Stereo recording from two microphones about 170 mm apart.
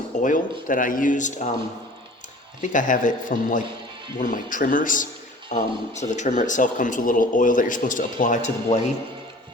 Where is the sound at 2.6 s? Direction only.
50° left (ahead or behind).